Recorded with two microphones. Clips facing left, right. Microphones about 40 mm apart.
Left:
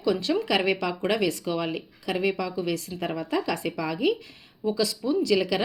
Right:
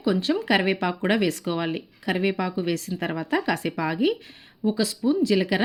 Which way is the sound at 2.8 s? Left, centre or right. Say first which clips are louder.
Right 2 dB; right.